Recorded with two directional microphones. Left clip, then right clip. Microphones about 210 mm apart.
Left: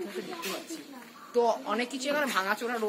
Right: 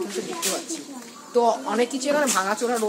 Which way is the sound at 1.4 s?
45° left (ahead or behind).